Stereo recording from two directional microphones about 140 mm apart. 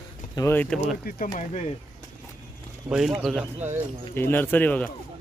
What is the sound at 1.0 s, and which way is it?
Speech, 90° left.